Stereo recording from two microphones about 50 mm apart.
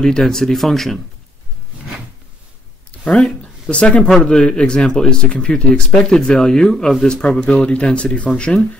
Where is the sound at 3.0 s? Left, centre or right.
Left.